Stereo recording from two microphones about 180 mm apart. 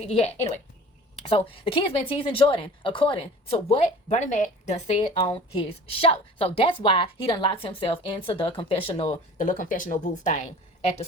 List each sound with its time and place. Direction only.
0.0 s a woman's voice: 35° left (ahead or behind)
9.4 s speech: 50° left (ahead or behind)